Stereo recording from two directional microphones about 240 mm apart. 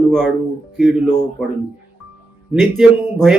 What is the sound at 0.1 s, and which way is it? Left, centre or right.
Speech, centre.